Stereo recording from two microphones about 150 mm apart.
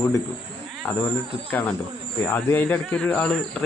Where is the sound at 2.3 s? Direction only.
15° left (ahead or behind).